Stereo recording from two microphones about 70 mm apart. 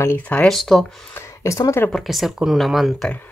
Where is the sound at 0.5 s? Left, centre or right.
Centre.